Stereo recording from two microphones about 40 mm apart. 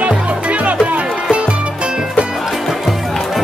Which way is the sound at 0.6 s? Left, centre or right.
Right.